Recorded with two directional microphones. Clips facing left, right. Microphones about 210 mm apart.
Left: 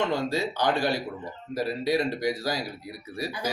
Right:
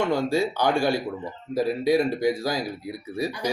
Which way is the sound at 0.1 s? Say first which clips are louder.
Right 4 dB; 10° right (ahead or behind).